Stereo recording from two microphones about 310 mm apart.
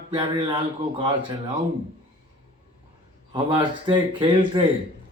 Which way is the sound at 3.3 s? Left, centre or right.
Centre.